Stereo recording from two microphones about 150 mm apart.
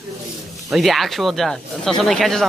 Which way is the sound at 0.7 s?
Centre (ahead or behind).